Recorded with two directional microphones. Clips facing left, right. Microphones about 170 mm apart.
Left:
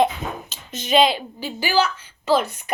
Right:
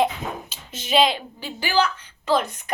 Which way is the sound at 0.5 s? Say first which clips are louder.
Left 1 dB; 10° right (ahead or behind).